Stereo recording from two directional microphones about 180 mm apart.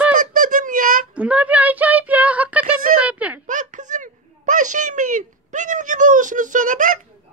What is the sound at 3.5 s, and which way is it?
Speech, 45° right (ahead or behind).